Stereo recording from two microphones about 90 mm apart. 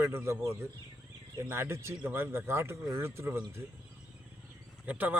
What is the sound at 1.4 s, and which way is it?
Speech, 30° right (ahead or behind).